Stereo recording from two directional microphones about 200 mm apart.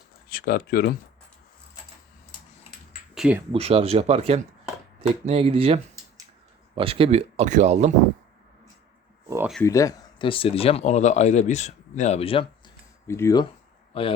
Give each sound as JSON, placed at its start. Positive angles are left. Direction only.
{"t": 0.3, "sound": "speech", "side_deg": 45}
{"t": 3.2, "sound": "speech", "side_deg": -5}
{"t": 3.5, "sound": "speech", "side_deg": -30}
{"t": 9.6, "sound": "speech", "side_deg": 15}
{"t": 13.1, "sound": "speech", "side_deg": 15}